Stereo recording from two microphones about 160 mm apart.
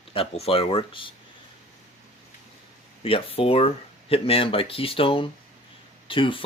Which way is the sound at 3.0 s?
35° left (ahead or behind).